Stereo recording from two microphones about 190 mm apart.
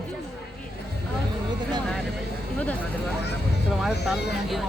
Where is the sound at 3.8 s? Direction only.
Centre (ahead or behind).